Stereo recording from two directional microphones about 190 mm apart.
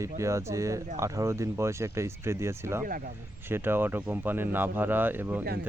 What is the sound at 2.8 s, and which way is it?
Speech, 50° right (ahead or behind).